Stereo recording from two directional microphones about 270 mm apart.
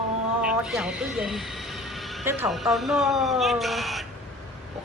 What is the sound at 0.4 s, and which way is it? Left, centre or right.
A woman's voice, centre.